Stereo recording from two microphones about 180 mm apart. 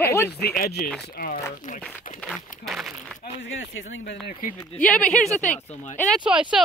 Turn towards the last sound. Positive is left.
turn(degrees=-5)  # may be behind; listen again after turning